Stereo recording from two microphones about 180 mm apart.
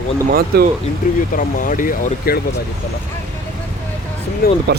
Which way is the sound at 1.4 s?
45° left (ahead or behind).